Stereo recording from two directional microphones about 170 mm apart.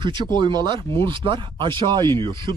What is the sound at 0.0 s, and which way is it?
Speech, 25° right (ahead or behind).